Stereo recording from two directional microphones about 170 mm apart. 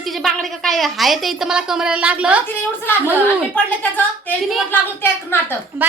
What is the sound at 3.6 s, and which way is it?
A woman's voice, 10° left (ahead or behind).